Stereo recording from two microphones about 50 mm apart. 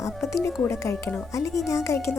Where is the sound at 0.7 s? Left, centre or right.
Left.